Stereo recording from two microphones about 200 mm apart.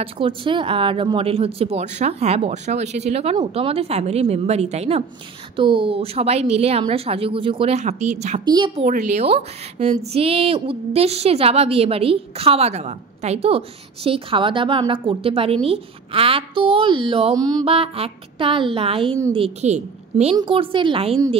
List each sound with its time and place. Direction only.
0.0 s a woman's voice: 25° right (ahead or behind)
8.5 s a woman's voice: 20° right (ahead or behind)
8.8 s a woman's voice: 35° right (ahead or behind)